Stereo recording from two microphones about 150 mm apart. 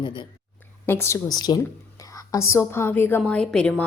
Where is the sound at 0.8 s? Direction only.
15° left (ahead or behind).